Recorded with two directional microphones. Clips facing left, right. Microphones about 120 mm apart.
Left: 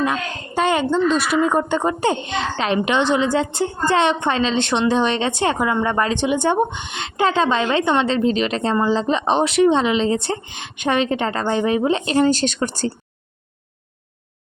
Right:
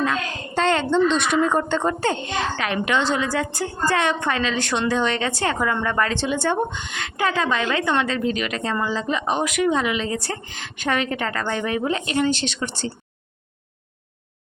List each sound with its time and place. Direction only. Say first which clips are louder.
0.0 s a woman's voice: left 2 dB; 15° left (ahead or behind)
12.1 s speech: left 5 dB; 40° left (ahead or behind)